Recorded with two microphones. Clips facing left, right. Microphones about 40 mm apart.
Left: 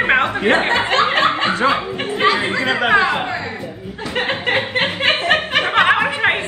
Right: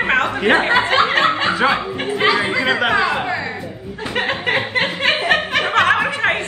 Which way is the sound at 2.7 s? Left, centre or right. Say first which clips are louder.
Left 2 dB; left.